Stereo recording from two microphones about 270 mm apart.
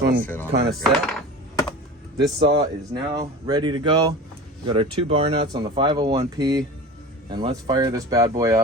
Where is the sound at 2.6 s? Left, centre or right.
Centre.